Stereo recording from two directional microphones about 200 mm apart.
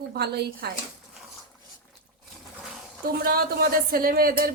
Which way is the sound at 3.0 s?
50° right (ahead or behind).